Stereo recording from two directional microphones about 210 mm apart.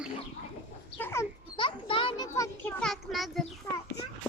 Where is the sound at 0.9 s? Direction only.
10° left (ahead or behind).